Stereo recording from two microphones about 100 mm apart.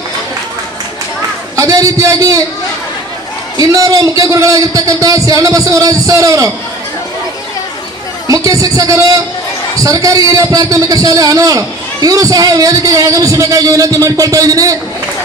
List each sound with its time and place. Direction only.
1.6 s a man's voice: 35° right (ahead or behind)
3.6 s a man's voice: 35° right (ahead or behind)
8.3 s a man's voice: 35° right (ahead or behind)